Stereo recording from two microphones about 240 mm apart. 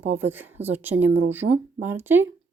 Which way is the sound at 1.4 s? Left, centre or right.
Right.